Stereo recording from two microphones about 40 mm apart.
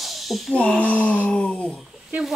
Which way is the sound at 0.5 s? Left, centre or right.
Left.